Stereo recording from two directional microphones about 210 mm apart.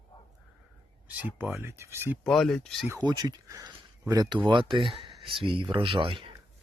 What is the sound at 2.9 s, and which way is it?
Speech, 20° right (ahead or behind).